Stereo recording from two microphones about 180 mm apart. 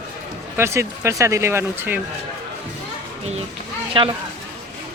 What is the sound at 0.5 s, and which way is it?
Speech, 15° right (ahead or behind).